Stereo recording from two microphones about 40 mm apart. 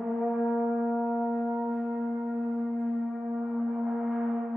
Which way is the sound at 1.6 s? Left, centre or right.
Right.